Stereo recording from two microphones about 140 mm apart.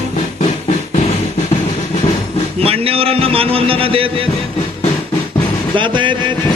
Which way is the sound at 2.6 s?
45° right (ahead or behind).